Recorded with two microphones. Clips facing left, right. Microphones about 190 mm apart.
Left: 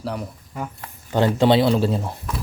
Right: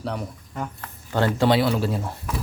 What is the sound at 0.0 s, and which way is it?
Speech, centre (ahead or behind).